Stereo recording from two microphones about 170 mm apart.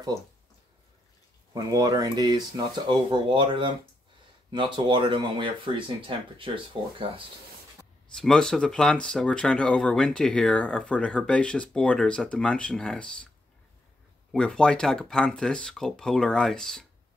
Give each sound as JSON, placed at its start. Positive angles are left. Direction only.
{"t": 0.1, "sound": "speech", "side_deg": 0}
{"t": 1.5, "sound": "speech", "side_deg": -20}
{"t": 8.1, "sound": "speech", "side_deg": 5}
{"t": 14.3, "sound": "speech", "side_deg": 5}